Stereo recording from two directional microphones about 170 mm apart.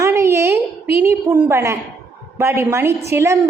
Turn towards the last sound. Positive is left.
turn(degrees=-15)  # may be behind; listen again after turning